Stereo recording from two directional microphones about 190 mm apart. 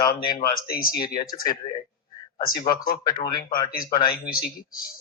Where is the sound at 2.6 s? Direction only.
50° left (ahead or behind).